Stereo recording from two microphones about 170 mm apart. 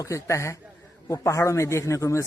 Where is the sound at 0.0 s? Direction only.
15° left (ahead or behind).